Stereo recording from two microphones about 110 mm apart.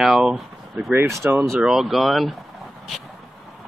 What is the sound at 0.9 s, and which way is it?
Speech, 25° right (ahead or behind).